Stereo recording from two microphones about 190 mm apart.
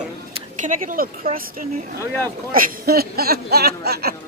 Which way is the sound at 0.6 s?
45° right (ahead or behind).